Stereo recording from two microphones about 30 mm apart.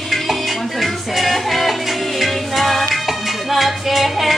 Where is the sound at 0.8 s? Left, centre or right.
Centre.